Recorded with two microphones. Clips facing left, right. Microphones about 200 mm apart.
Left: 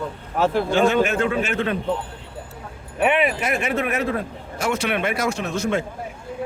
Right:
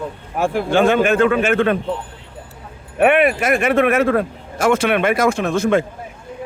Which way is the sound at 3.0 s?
55° right (ahead or behind).